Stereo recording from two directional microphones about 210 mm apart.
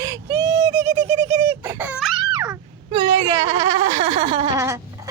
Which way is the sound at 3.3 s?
30° right (ahead or behind).